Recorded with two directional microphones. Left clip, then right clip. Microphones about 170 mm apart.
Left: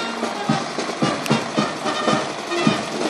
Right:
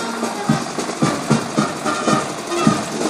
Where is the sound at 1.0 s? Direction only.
5° right (ahead or behind).